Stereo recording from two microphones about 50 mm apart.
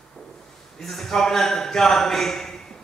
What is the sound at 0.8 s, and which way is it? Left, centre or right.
A man's voice, centre.